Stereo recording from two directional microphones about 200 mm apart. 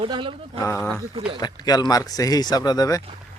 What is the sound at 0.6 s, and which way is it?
Speech, 10° left (ahead or behind).